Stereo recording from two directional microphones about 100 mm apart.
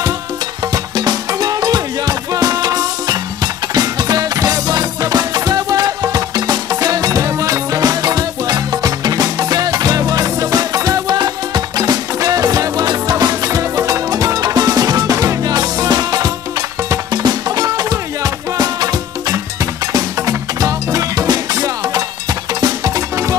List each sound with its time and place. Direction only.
0.9 s music: 45° right (ahead or behind)